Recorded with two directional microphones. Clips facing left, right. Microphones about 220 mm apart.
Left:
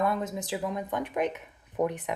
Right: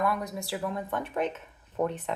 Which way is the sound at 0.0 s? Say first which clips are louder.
Left 1 dB; 25° left (ahead or behind).